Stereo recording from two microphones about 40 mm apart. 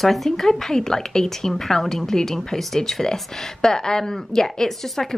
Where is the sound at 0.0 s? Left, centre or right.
Centre.